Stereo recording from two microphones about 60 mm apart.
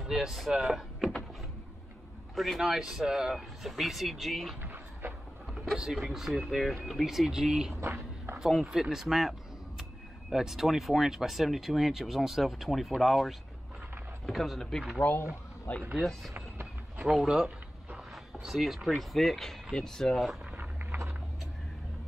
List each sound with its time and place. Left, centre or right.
0.1 s speech: centre
2.3 s speech: centre
4.6 s a sound: right
5.5 s speech: centre
7.7 s a sound: right
8.4 s speech: centre
10.3 s speech: centre
15.7 s speech: left
16.0 s speech: centre
17.1 s speech: centre
20.5 s a sound: right